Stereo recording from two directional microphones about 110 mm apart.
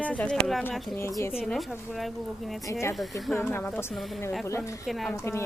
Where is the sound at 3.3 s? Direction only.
20° left (ahead or behind).